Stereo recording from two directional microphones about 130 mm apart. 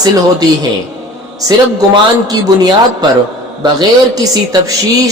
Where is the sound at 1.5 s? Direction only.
30° right (ahead or behind).